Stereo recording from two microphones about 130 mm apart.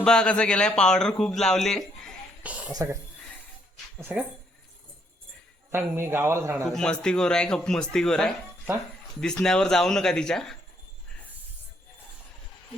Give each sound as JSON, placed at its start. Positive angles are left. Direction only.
{"t": 0.0, "sound": "speech", "side_deg": 5}
{"t": 2.4, "sound": "a sound", "side_deg": -10}
{"t": 2.7, "sound": "a man's voice", "side_deg": -20}
{"t": 3.9, "sound": "speech", "side_deg": -10}
{"t": 5.7, "sound": "a man's voice", "side_deg": -20}
{"t": 6.7, "sound": "a man's voice", "side_deg": 5}